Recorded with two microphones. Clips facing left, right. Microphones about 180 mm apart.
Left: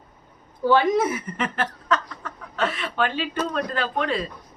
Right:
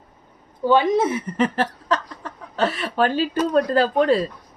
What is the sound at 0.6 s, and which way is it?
Speech, 20° right (ahead or behind).